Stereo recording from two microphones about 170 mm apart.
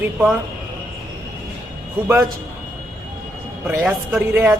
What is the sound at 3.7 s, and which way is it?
Speech, 10° right (ahead or behind).